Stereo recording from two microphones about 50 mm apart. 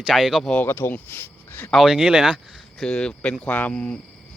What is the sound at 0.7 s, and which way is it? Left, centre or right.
Speech, left.